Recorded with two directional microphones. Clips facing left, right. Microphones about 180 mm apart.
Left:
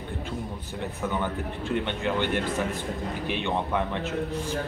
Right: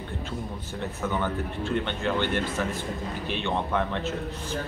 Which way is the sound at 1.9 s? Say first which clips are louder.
Even; 15° left (ahead or behind).